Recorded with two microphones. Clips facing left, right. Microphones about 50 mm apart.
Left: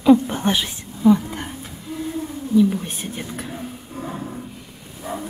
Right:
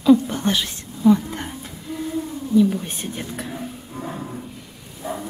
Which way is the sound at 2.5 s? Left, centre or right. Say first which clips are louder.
Even; centre.